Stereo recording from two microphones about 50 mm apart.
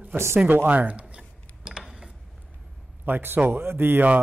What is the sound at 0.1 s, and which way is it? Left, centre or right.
Speech, right.